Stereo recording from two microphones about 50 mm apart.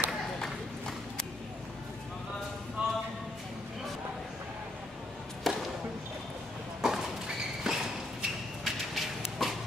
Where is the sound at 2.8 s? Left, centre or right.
Centre.